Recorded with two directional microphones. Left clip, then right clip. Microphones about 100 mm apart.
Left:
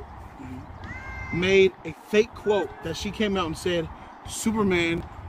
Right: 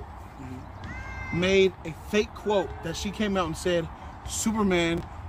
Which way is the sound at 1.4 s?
90° right.